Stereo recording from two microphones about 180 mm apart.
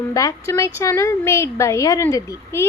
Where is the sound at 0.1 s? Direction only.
20° left (ahead or behind).